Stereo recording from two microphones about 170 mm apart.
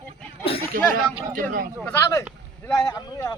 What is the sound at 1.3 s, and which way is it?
Speech, 55° right (ahead or behind).